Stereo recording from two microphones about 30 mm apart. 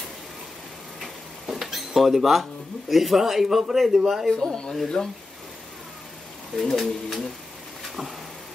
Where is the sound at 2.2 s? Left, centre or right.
Centre.